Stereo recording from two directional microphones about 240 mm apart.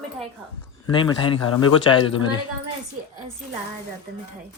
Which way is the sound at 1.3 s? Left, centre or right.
Left.